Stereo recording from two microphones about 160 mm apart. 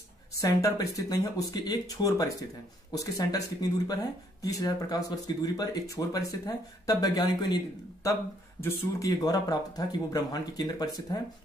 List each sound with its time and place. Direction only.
0.4 s speech: 20° left (ahead or behind)